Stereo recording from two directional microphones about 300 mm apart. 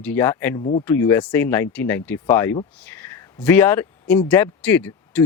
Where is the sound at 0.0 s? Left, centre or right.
Centre.